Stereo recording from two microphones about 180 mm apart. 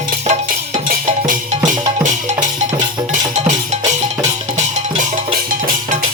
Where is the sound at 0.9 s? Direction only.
50° right (ahead or behind).